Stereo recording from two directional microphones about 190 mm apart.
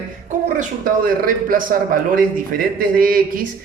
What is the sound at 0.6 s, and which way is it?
A man's voice, 45° right (ahead or behind).